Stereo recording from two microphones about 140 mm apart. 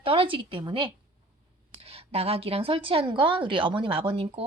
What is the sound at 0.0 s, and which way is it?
A woman's voice, 40° right (ahead or behind).